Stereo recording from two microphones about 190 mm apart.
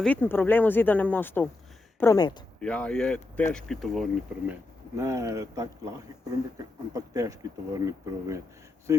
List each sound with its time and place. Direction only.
0.0 s speech: 10° left (ahead or behind)
2.6 s speech: 5° left (ahead or behind)
4.9 s speech: 15° right (ahead or behind)
6.9 s speech: 15° right (ahead or behind)